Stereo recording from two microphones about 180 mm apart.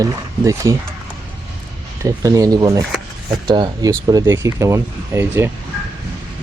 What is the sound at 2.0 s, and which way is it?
Speech, 20° right (ahead or behind).